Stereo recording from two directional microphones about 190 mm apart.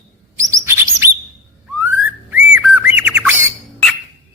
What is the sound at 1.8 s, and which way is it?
Whistling, 10° right (ahead or behind).